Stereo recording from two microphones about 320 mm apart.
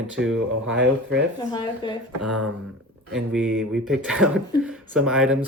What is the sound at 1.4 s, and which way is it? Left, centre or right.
Speech, centre.